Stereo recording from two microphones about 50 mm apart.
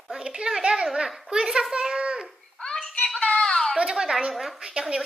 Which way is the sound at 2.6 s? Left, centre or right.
Centre.